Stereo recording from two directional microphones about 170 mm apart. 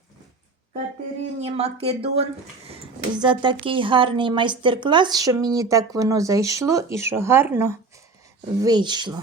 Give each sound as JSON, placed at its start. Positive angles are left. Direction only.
{"t": 1.4, "sound": "speech", "side_deg": -40}
{"t": 8.6, "sound": "speech", "side_deg": -25}